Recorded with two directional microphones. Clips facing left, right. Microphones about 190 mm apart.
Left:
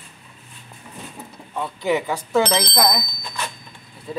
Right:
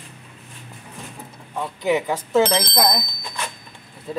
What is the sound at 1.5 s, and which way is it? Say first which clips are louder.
Speech: right 1 dB; 10° right (ahead or behind).